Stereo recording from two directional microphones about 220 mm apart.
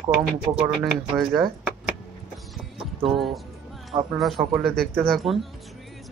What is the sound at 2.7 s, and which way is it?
Clip-clop, centre (ahead or behind).